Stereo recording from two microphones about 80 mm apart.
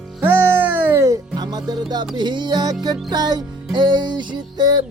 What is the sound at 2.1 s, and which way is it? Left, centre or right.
Music, right.